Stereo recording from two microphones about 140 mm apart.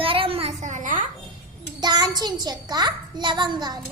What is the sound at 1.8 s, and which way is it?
A child's voice, 30° right (ahead or behind).